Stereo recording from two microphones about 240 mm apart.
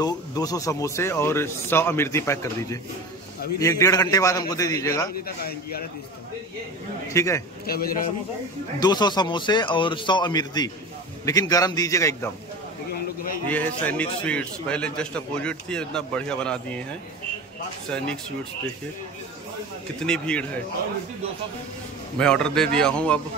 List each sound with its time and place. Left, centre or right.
0.0 s speech: centre
5.2 s a man's voice: left
7.2 s speech: centre
7.6 s a man's voice: left
8.7 s speech: centre
13.5 s a man's voice: centre
20.0 s a man's voice: centre
22.2 s a man's voice: centre